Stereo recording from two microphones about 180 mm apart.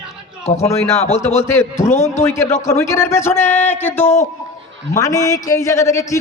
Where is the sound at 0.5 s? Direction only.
15° left (ahead or behind).